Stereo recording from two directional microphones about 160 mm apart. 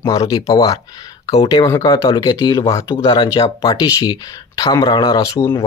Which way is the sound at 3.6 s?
20° left (ahead or behind).